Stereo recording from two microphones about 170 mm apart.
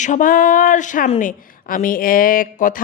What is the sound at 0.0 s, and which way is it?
Speech, 50° left (ahead or behind).